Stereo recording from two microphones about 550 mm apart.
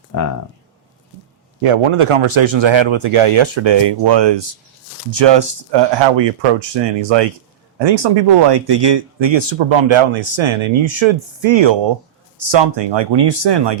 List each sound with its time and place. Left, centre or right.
1.6 s speech: right